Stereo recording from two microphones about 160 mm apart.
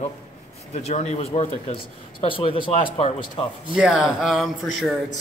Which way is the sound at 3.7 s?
5° right (ahead or behind).